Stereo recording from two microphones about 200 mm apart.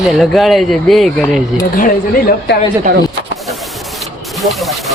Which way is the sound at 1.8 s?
45° left (ahead or behind).